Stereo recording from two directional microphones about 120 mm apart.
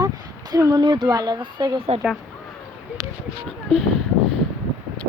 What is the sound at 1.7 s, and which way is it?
Speech, 55° right (ahead or behind).